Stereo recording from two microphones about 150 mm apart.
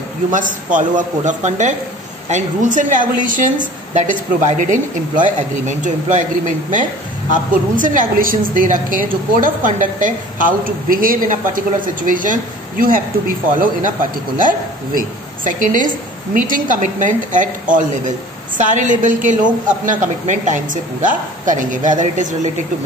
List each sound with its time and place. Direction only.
0.3 s a woman's voice: 60° right (ahead or behind)
14.4 s a woman's voice: 65° right (ahead or behind)